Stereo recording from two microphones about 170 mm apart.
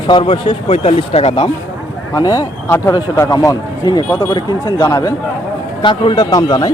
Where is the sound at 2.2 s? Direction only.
20° left (ahead or behind).